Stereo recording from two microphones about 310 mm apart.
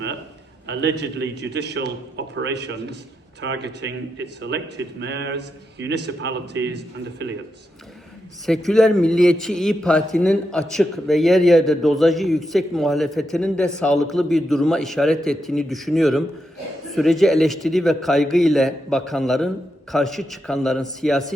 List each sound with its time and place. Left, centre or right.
0.7 s a man's voice: right
8.4 s a man's voice: centre